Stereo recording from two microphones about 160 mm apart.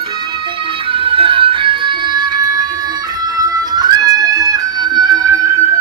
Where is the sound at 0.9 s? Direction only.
35° right (ahead or behind).